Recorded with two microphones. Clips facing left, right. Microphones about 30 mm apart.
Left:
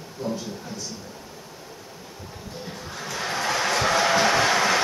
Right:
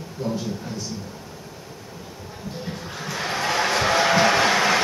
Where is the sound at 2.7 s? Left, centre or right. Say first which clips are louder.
Right 1 dB; centre.